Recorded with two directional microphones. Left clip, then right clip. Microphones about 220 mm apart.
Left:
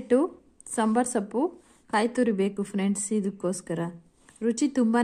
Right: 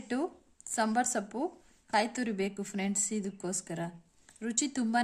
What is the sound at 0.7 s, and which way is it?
Speech, 5° left (ahead or behind).